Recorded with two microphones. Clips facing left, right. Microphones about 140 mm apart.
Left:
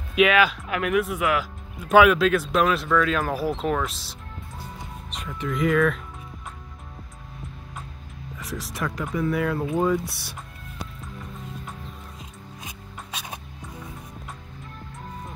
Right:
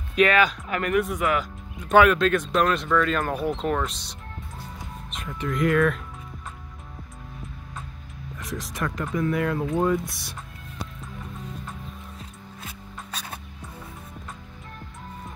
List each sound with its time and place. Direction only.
0.1 s speech: 5° left (ahead or behind)
8.4 s speech: centre (ahead or behind)
10.0 s speech: 60° left (ahead or behind)
13.1 s music: 10° left (ahead or behind)